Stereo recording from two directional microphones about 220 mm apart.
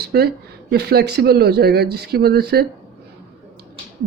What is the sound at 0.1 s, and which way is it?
Speech, 50° right (ahead or behind).